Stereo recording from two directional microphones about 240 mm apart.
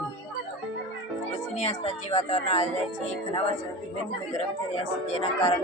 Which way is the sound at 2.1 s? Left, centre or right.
Left.